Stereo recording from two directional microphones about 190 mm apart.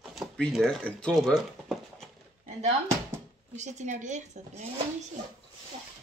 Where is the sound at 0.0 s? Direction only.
Centre (ahead or behind).